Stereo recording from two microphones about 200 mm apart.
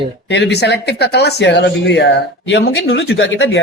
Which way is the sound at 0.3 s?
60° left (ahead or behind).